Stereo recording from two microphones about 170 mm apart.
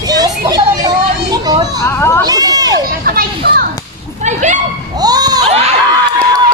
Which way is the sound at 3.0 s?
60° right (ahead or behind).